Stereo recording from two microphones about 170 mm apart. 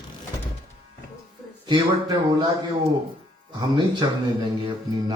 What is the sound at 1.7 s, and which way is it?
Speech, 25° right (ahead or behind).